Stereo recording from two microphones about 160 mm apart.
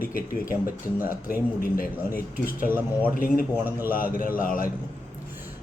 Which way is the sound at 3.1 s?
60° left (ahead or behind).